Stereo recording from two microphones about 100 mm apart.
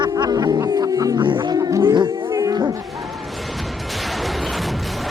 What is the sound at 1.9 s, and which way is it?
Speech, 55° right (ahead or behind).